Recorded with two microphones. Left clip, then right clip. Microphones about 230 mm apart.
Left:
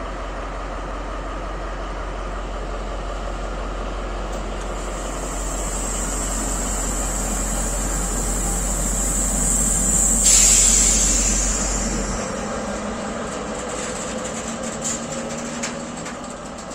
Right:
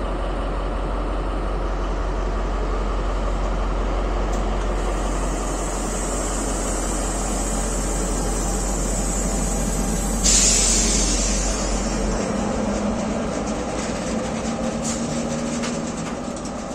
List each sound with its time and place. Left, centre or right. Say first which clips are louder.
10.2 s electric toothbrush: left 1 dB; left